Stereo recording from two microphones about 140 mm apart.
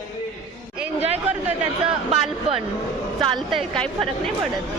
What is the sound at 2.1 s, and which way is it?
Speech, 45° right (ahead or behind).